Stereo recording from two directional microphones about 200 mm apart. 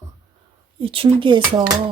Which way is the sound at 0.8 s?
25° right (ahead or behind).